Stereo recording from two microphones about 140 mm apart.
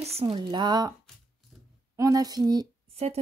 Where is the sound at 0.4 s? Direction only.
30° right (ahead or behind).